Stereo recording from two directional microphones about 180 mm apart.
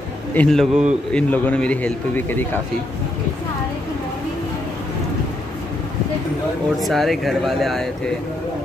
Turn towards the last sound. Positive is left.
turn(degrees=0)  # may be behind; listen again after turning